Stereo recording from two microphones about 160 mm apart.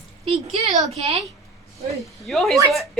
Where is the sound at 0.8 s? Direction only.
45° right (ahead or behind).